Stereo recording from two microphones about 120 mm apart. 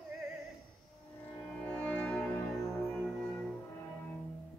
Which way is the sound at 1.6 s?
10° left (ahead or behind).